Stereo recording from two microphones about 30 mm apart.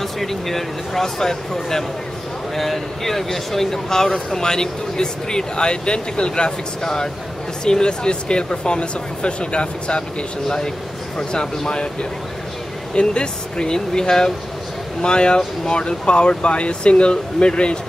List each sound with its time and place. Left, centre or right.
0.0 s speech: centre
2.5 s speech: centre; by 10.0 s left
11.1 s speech: left
15.0 s speech: left